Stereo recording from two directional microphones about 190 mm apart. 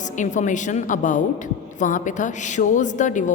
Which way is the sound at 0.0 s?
40° left (ahead or behind).